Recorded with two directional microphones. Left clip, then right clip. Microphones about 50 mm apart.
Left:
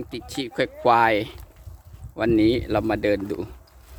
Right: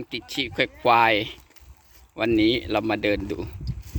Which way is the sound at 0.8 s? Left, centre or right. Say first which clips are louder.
Even; left.